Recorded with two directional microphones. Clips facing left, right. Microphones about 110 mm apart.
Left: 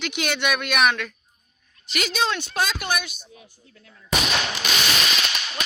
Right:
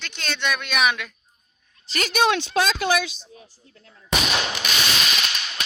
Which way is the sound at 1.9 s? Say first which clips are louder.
Even; 40° right (ahead or behind).